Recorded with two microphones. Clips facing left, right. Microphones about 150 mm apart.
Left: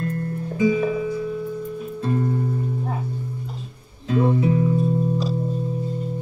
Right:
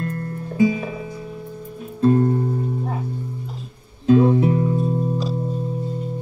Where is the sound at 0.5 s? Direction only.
Centre (ahead or behind).